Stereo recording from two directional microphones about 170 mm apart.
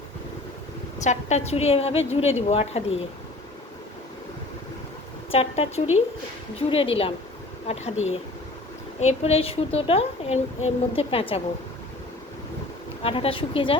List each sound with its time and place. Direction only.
1.0 s a woman's voice: 40° left (ahead or behind)
5.3 s a woman's voice: 35° left (ahead or behind)
13.0 s a woman's voice: 35° left (ahead or behind)